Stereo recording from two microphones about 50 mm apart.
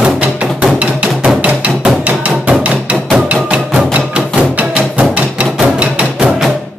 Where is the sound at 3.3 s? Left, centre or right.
Right.